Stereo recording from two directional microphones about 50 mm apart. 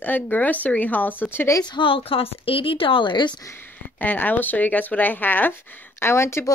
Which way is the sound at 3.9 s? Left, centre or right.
Left.